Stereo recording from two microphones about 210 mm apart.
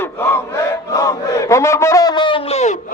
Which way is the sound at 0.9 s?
15° left (ahead or behind).